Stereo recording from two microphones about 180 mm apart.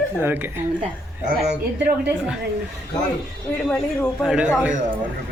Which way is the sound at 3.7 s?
Centre (ahead or behind).